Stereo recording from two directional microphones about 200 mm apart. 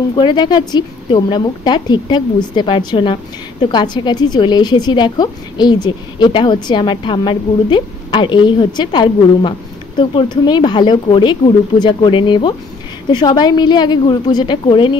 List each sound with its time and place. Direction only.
0.1 s a woman's voice: 20° left (ahead or behind)